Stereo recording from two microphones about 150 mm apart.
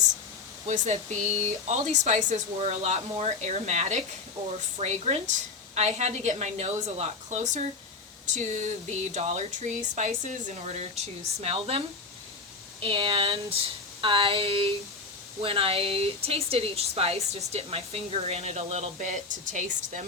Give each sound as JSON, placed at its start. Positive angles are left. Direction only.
{"t": 0.7, "sound": "speech", "side_deg": -50}
{"t": 12.8, "sound": "speech", "side_deg": -35}